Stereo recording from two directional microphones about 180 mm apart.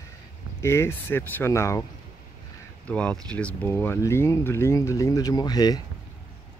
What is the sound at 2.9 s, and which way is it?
Speech, 5° left (ahead or behind).